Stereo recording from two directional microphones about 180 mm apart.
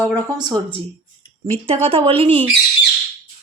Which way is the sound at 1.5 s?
35° right (ahead or behind).